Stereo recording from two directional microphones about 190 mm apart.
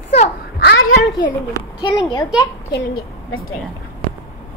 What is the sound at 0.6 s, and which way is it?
Speech, 65° left (ahead or behind).